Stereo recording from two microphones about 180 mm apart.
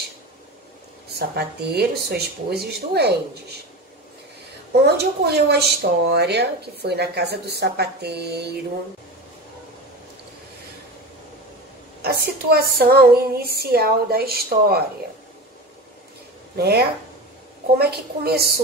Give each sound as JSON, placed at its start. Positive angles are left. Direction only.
{"t": 1.1, "sound": "speech", "side_deg": -60}
{"t": 4.8, "sound": "speech", "side_deg": -65}
{"t": 12.0, "sound": "speech", "side_deg": -60}
{"t": 16.5, "sound": "speech", "side_deg": -60}